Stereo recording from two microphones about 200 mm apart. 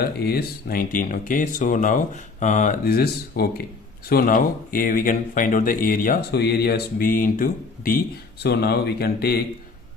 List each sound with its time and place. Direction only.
0.0 s speech: 50° left (ahead or behind)